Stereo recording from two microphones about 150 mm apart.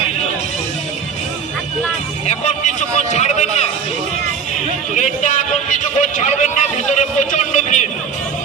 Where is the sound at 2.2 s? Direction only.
50° left (ahead or behind).